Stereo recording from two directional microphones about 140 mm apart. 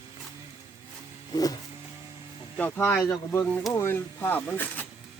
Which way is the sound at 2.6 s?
15° left (ahead or behind).